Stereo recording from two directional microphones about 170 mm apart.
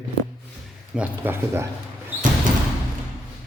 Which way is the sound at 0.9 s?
10° right (ahead or behind).